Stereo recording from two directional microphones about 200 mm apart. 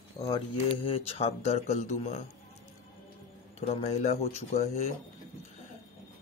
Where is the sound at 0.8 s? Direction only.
30° left (ahead or behind).